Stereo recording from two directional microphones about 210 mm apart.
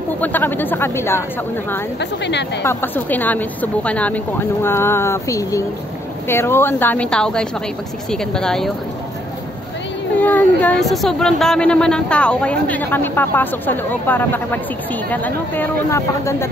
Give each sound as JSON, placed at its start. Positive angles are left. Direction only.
{"t": 0.2, "sound": "speech", "side_deg": 10}
{"t": 2.0, "sound": "a woman's voice", "side_deg": 55}
{"t": 2.6, "sound": "speech", "side_deg": 10}
{"t": 10.1, "sound": "speech", "side_deg": 10}